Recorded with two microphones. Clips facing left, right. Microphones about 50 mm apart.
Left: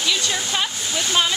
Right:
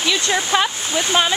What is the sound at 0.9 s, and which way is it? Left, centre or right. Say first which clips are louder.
Speech: even; right.